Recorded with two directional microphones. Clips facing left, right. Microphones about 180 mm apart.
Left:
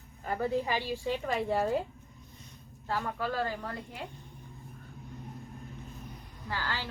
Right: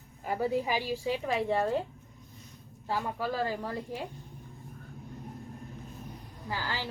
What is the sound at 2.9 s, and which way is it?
Speech, 15° right (ahead or behind).